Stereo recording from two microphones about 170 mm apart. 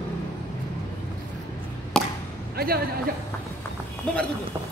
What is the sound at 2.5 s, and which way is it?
Speech, 65° right (ahead or behind).